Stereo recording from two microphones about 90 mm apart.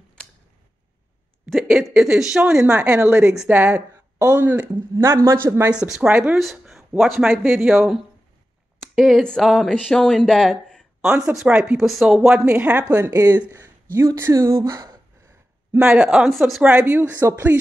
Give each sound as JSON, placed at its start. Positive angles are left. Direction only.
{"t": 1.5, "sound": "a woman's voice", "side_deg": -10}
{"t": 4.9, "sound": "speech", "side_deg": -30}
{"t": 5.7, "sound": "a woman's voice", "side_deg": -10}
{"t": 6.3, "sound": "a sound", "side_deg": -5}
{"t": 7.0, "sound": "speech", "side_deg": -5}
{"t": 11.1, "sound": "speech", "side_deg": -10}
{"t": 12.5, "sound": "a woman's voice", "side_deg": -15}
{"t": 12.9, "sound": "speech", "side_deg": -35}
{"t": 15.8, "sound": "a woman's voice", "side_deg": -10}